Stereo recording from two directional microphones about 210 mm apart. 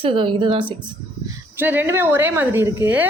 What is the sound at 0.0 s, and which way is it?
Speech, 25° right (ahead or behind).